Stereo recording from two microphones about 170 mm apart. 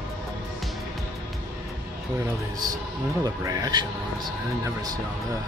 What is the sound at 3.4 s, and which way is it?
Speech, 20° right (ahead or behind).